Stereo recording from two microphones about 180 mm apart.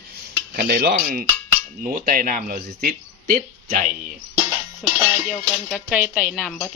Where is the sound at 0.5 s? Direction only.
60° right (ahead or behind).